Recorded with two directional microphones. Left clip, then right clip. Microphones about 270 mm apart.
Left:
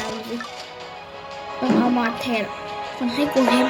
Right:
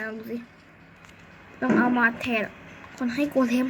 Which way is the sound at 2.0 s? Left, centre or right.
Centre.